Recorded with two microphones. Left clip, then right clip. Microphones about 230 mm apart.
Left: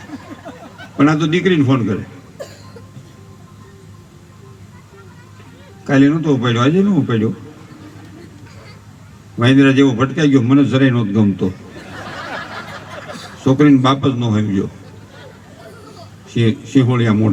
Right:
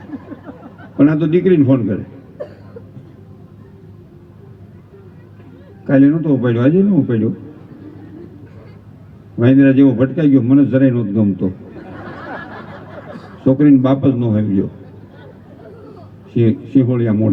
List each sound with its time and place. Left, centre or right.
1.0 s a man's voice: left
5.8 s a man's voice: left
9.4 s a man's voice: left
12.0 s a sound: left
13.4 s a man's voice: left
16.3 s a man's voice: left